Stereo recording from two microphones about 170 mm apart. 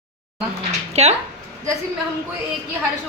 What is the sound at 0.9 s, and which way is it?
Speech, 40° right (ahead or behind).